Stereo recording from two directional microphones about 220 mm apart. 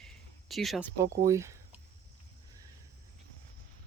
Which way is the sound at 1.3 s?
15° right (ahead or behind).